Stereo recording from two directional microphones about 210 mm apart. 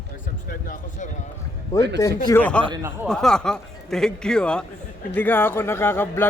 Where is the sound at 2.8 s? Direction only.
10° right (ahead or behind).